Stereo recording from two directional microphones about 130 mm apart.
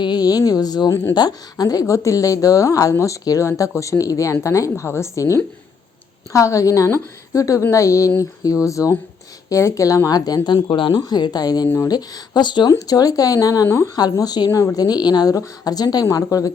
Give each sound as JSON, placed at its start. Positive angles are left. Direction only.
{"t": 0.0, "sound": "a woman's voice", "side_deg": 35}
{"t": 6.3, "sound": "a woman's voice", "side_deg": 25}